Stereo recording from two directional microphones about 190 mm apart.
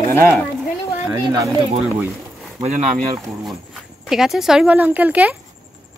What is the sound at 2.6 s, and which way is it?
Speech, 40° right (ahead or behind).